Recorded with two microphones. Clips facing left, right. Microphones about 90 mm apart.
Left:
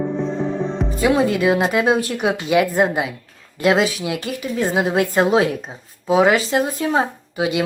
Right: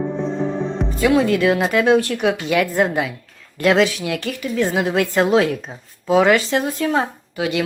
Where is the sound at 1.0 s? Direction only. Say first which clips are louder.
Right 1 dB; 20° left (ahead or behind).